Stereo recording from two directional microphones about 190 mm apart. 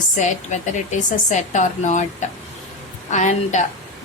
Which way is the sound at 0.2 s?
40° left (ahead or behind).